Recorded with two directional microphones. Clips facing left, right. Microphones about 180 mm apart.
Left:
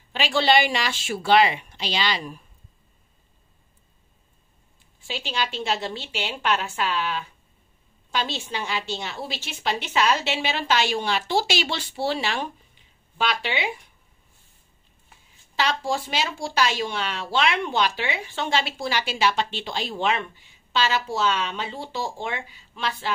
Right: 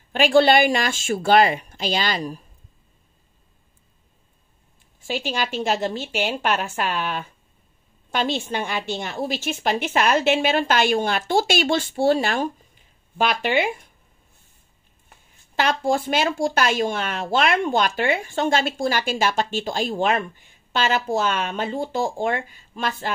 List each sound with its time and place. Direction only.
0.1 s speech: 50° right (ahead or behind)
5.0 s speech: 45° right (ahead or behind)
15.0 s speech: 50° right (ahead or behind)